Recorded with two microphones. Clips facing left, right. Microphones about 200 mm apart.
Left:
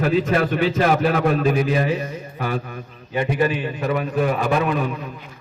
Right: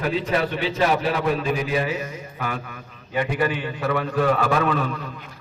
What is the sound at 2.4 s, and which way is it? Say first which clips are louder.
Mantra: left 4 dB; 35° left (ahead or behind).